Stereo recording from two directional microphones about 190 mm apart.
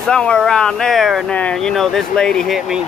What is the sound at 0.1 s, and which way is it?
Speech, 5° left (ahead or behind).